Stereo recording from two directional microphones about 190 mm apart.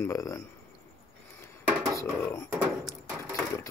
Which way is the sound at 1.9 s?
15° left (ahead or behind).